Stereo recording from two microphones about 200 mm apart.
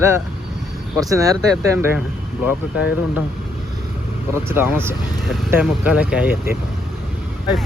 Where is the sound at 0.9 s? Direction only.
15° right (ahead or behind).